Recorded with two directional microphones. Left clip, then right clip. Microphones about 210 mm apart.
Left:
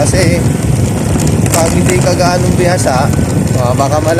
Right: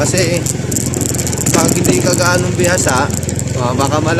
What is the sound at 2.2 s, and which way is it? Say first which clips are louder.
Speech: left 2 dB; 25° right (ahead or behind).